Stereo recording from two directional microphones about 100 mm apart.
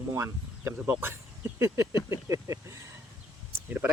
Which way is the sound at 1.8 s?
45° left (ahead or behind).